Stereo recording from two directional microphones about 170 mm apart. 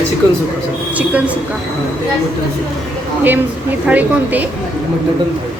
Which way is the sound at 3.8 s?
10° right (ahead or behind).